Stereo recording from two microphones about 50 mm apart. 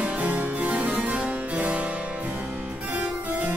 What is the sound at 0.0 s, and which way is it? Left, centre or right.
Harpsichord, right.